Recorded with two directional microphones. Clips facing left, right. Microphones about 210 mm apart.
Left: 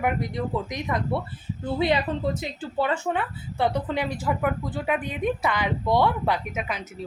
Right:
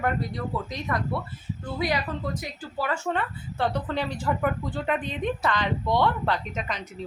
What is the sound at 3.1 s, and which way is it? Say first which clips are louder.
A woman's voice: left 1 dB; 10° left (ahead or behind).